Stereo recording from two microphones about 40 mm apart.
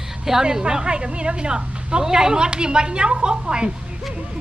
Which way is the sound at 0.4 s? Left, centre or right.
Right.